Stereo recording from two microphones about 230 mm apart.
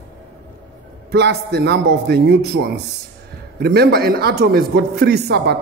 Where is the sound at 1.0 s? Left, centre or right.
Right.